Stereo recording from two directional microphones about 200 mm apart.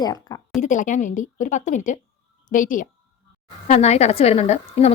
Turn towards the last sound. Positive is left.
turn(degrees=30)  # may be behind; listen again after turning